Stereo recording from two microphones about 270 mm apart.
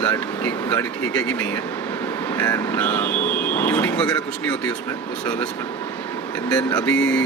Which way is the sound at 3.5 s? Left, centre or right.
Centre.